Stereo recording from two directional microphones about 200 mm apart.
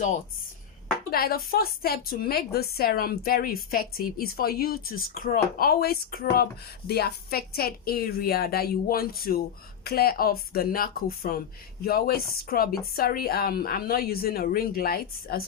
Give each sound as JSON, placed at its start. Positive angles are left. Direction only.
{"t": 1.1, "sound": "a woman's voice", "side_deg": 50}